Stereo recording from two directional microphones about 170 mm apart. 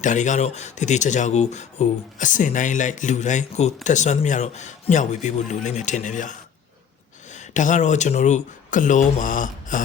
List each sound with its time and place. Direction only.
0.0 s speech: 45° left (ahead or behind)